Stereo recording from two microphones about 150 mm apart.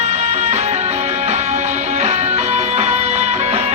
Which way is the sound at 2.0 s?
50° right (ahead or behind).